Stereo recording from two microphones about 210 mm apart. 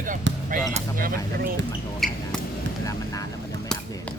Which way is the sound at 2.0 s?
Centre (ahead or behind).